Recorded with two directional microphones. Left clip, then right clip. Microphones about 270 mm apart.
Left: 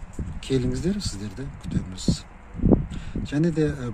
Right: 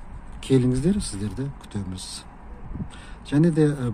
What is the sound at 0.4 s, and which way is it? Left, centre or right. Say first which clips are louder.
Speech: right 4 dB; centre.